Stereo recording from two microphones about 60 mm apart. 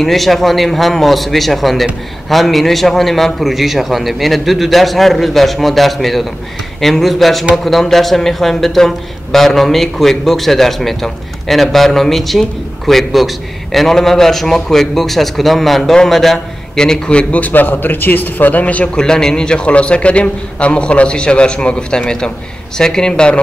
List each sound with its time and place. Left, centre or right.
0.0 s a man's voice: centre; by 18.9 s left
18.9 s a man's voice: centre